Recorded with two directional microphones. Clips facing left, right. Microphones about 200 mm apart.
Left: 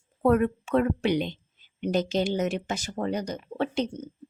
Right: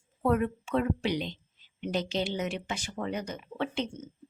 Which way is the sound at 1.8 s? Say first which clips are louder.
Left 5 dB; 45° left (ahead or behind).